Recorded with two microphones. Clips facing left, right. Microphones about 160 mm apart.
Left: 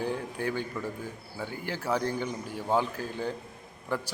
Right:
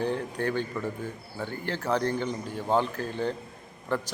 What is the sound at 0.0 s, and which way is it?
A man's voice, 10° left (ahead or behind).